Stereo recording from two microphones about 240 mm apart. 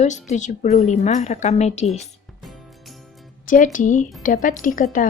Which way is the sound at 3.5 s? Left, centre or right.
Left.